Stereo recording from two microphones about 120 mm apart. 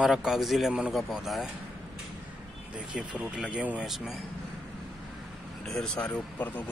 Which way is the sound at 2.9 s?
10° right (ahead or behind).